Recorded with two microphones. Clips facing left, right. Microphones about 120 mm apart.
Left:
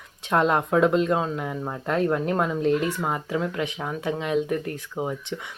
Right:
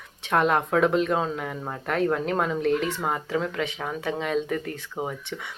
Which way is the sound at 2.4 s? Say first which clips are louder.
Left 1 dB; 15° left (ahead or behind).